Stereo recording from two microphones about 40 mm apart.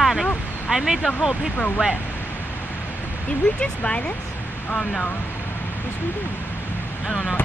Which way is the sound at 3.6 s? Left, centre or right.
Left.